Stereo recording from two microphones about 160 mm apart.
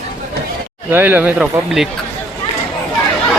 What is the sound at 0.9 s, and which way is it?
Speech, 10° right (ahead or behind).